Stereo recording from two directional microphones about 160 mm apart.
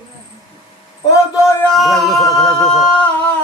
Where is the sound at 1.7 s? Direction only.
Centre (ahead or behind).